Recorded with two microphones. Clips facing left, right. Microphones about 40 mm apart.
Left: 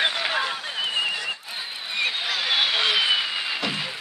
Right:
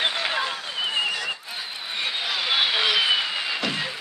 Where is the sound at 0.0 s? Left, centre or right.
Centre.